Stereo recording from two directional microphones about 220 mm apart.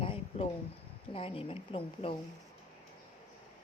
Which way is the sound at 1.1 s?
25° left (ahead or behind).